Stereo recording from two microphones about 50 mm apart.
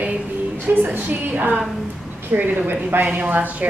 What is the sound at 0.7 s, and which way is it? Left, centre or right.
A woman's voice, right.